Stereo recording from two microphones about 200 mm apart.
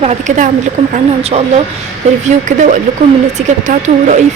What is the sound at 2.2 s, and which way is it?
Speech, 40° right (ahead or behind).